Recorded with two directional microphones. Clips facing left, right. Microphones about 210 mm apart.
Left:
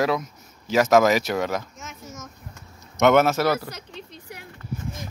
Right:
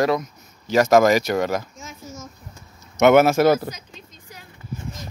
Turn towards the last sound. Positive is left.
turn(degrees=65)  # may be behind; listen again after turning